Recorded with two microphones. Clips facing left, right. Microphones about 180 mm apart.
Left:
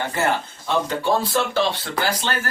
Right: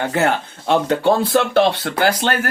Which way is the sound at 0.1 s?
70° right (ahead or behind).